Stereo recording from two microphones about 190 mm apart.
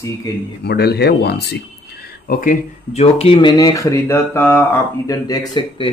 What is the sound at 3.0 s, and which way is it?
Speech, 30° left (ahead or behind).